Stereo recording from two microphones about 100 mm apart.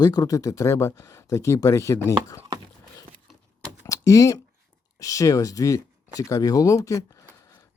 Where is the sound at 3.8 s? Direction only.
30° left (ahead or behind).